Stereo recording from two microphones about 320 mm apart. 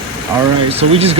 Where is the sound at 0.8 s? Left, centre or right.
Centre.